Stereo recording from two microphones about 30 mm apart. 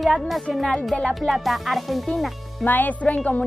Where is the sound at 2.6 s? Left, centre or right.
Left.